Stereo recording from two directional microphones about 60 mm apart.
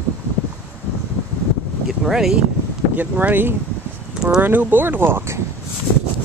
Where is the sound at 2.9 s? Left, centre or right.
Right.